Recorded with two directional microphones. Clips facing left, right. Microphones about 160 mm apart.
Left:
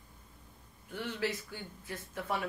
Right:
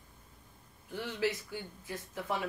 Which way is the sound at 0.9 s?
15° right (ahead or behind).